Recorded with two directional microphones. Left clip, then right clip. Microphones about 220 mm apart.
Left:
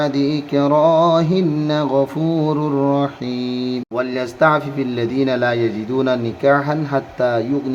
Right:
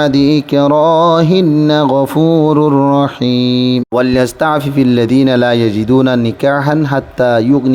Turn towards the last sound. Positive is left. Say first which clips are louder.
# right 6 dB
turn(degrees=-40)  # may be behind; listen again after turning